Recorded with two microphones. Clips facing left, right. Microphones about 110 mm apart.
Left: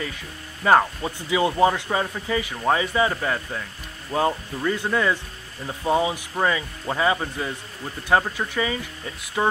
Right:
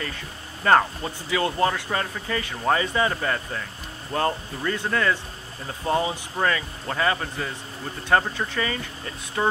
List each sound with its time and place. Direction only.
0.7 s speech: 5° left (ahead or behind)